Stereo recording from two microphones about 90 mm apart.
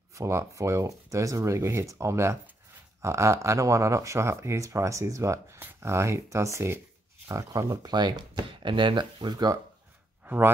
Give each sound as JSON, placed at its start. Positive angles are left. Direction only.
{"t": 0.1, "sound": "speech", "side_deg": -35}
{"t": 10.2, "sound": "speech", "side_deg": -20}